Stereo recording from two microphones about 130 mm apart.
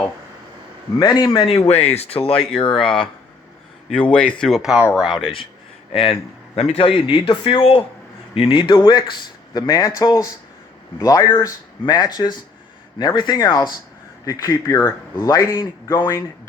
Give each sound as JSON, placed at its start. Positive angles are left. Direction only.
{"t": 0.9, "sound": "speech", "side_deg": 30}
{"t": 1.5, "sound": "speech", "side_deg": 55}
{"t": 4.0, "sound": "speech", "side_deg": 10}
{"t": 5.2, "sound": "speech", "side_deg": 45}